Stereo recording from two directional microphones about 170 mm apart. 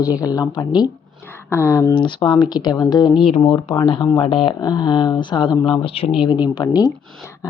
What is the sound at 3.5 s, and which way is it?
Speech, 20° left (ahead or behind).